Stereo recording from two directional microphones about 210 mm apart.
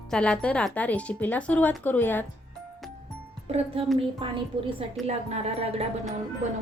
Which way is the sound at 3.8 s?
25° right (ahead or behind).